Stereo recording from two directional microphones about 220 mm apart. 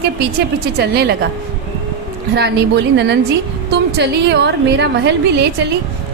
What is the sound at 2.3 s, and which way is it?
A woman's voice, 50° right (ahead or behind).